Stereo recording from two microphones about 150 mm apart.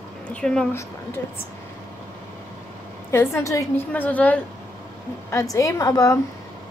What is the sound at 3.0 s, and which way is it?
A woman's voice, 20° left (ahead or behind).